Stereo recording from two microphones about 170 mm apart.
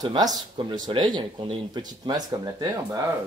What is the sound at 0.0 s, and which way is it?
Speech, 25° right (ahead or behind).